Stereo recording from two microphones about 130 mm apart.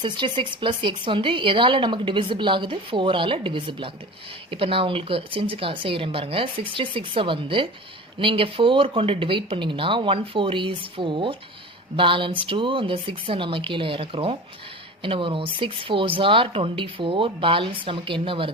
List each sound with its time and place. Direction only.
0.0 s speech: 40° right (ahead or behind)